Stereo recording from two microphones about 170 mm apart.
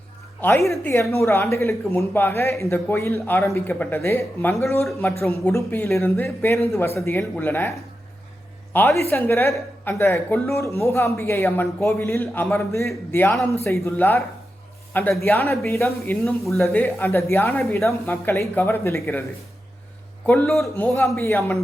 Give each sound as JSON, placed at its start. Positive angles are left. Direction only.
{"t": 0.7, "sound": "speech", "side_deg": 15}
{"t": 8.7, "sound": "a woman's voice", "side_deg": 15}
{"t": 15.2, "sound": "speech", "side_deg": 15}
{"t": 16.2, "sound": "speech", "side_deg": 0}
{"t": 16.6, "sound": "speech", "side_deg": 10}
{"t": 20.2, "sound": "speech", "side_deg": 10}